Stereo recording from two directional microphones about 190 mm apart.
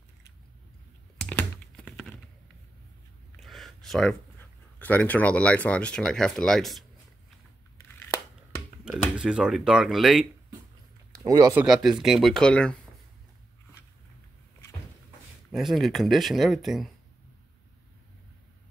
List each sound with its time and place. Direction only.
1.2 s computer keyboard: 5° left (ahead or behind)
3.3 s speech: centre (ahead or behind)
8.8 s speech: 5° right (ahead or behind)
11.1 s speech: 20° right (ahead or behind)
11.6 s speech: centre (ahead or behind)
15.5 s speech: centre (ahead or behind)